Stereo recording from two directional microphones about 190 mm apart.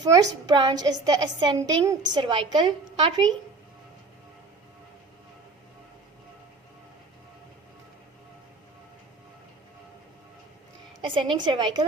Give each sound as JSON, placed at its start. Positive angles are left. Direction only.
{"t": 0.0, "sound": "a woman's voice", "side_deg": -20}
{"t": 11.0, "sound": "a woman's voice", "side_deg": -25}